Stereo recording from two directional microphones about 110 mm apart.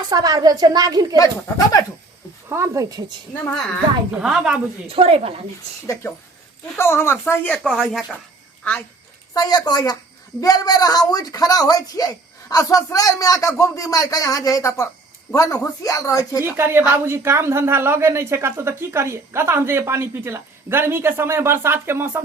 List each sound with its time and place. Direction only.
0.1 s a woman's voice: 35° right (ahead or behind)
1.1 s a woman's voice: 30° left (ahead or behind)
2.5 s a woman's voice: 30° right (ahead or behind)
4.2 s speech: 5° right (ahead or behind)
4.9 s a woman's voice: 60° right (ahead or behind)
6.0 s speech: 25° left (ahead or behind)
7.6 s speech: centre (ahead or behind)
9.3 s a woman's voice: 35° left (ahead or behind)
16.4 s a woman's voice: 20° right (ahead or behind)